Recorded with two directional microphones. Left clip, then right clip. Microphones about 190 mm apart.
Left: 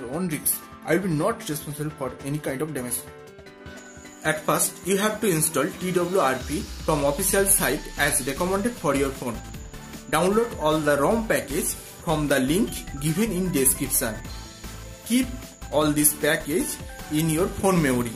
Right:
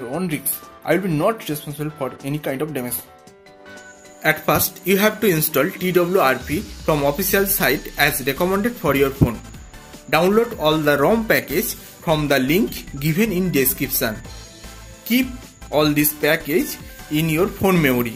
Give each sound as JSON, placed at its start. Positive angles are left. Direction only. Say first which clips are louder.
{"t": 0.8, "sound": "speech", "louder": "right 5 dB", "side_deg": -10}
{"t": 4.2, "sound": "speech", "louder": "right 6 dB", "side_deg": -20}
{"t": 15.7, "sound": "speech", "louder": "right 5 dB", "side_deg": -10}